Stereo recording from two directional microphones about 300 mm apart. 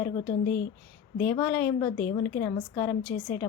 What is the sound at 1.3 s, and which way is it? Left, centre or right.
A woman's voice, centre.